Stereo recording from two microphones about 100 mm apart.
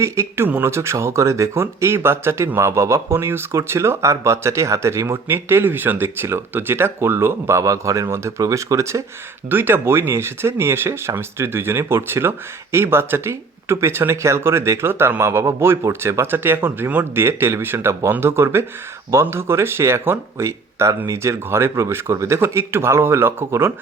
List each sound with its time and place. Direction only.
0.0 s speech: 30° right (ahead or behind)